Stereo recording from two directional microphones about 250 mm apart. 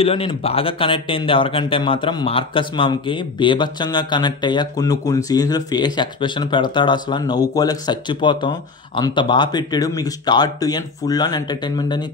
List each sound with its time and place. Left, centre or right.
0.0 s speech: left